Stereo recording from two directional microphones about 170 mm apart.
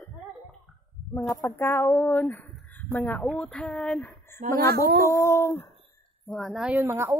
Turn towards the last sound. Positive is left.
turn(degrees=-15)  # may be behind; listen again after turning